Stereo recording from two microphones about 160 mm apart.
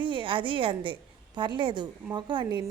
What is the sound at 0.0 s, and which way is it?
A woman's voice, 30° right (ahead or behind).